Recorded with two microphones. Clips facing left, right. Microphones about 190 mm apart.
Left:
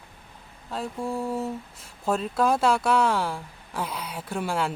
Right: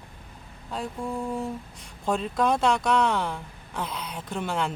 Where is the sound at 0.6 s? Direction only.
Centre (ahead or behind).